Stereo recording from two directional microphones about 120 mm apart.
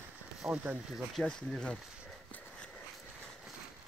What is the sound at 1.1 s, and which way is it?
Speech, 5° left (ahead or behind).